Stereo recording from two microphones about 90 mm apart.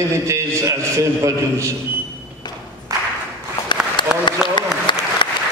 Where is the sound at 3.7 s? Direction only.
60° left (ahead or behind).